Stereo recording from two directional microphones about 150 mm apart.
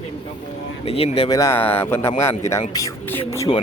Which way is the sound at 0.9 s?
40° left (ahead or behind).